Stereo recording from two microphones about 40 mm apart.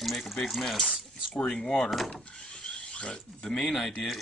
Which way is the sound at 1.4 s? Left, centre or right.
Centre.